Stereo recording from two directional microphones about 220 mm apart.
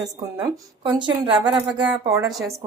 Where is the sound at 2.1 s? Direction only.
5° right (ahead or behind).